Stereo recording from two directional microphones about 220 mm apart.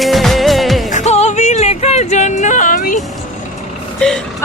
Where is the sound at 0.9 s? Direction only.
30° left (ahead or behind).